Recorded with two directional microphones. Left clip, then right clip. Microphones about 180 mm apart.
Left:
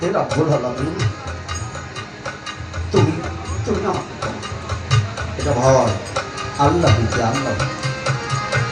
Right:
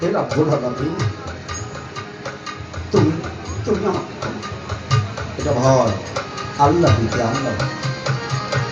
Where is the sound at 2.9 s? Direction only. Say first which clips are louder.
Right 1 dB; 35° right (ahead or behind).